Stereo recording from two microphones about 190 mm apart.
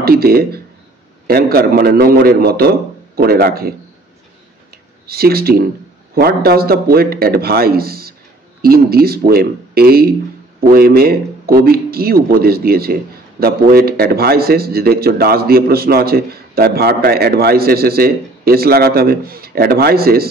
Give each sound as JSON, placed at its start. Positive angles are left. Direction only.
{"t": 0.0, "sound": "speech", "side_deg": -55}
{"t": 5.0, "sound": "speech", "side_deg": -55}